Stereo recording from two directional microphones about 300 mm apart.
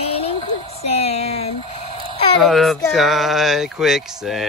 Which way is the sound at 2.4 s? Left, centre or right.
Centre.